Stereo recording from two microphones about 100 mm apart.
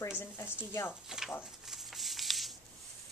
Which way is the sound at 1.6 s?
5° right (ahead or behind).